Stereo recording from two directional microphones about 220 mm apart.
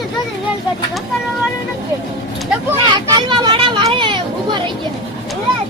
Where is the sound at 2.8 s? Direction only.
20° right (ahead or behind).